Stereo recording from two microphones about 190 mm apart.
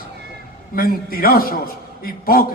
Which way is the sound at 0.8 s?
50° left (ahead or behind).